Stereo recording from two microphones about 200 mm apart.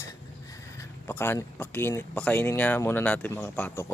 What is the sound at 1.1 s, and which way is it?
Speech, 10° left (ahead or behind).